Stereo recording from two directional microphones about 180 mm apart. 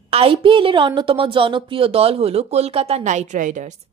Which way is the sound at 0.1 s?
30° right (ahead or behind).